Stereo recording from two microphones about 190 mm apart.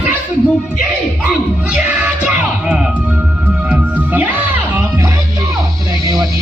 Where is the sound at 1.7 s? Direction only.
5° right (ahead or behind).